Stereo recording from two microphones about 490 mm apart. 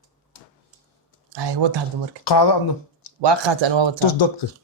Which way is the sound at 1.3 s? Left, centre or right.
Right.